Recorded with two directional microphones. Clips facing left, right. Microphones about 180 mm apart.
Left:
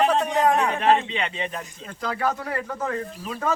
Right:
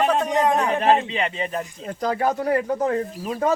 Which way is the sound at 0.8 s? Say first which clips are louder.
Right 2 dB; 40° right (ahead or behind).